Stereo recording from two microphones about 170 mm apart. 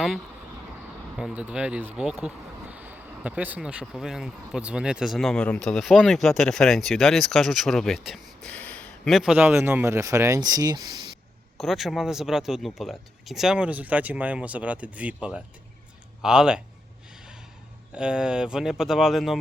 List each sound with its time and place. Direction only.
1.2 s speech: 10° right (ahead or behind); by 11.2 s 25° right (ahead or behind)
11.5 s speech: centre (ahead or behind)
17.9 s speech: 5° right (ahead or behind)